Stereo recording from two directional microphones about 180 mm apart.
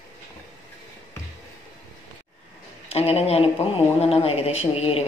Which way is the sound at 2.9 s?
35° left (ahead or behind).